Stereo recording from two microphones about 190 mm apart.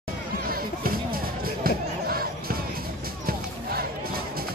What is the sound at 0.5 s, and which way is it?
Music, 50° right (ahead or behind).